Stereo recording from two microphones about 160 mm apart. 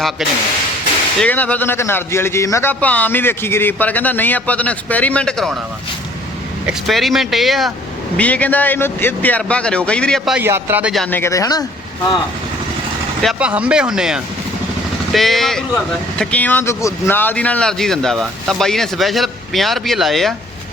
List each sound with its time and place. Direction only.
1.2 s a man's voice: 10° left (ahead or behind)
6.7 s a man's voice: centre (ahead or behind)
10.3 s speech: 15° right (ahead or behind)
10.9 s speech: 5° left (ahead or behind)
11.2 s speech: 20° left (ahead or behind)
13.2 s speech: 5° right (ahead or behind)